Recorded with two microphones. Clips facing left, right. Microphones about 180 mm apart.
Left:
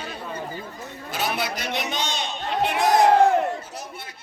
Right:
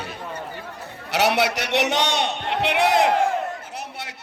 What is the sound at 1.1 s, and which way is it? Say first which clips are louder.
A man's voice: right 7 dB; 75° right (ahead or behind).